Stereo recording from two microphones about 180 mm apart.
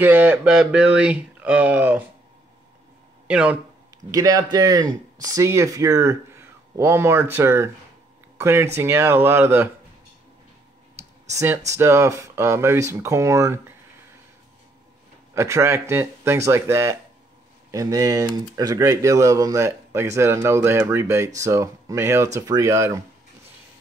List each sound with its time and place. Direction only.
0.0 s speech: 10° right (ahead or behind)
3.3 s speech: 5° right (ahead or behind)
4.1 s speech: 20° right (ahead or behind)
11.0 s clicking: 15° right (ahead or behind)
11.7 s speech: 15° right (ahead or behind)
15.3 s speech: 15° right (ahead or behind)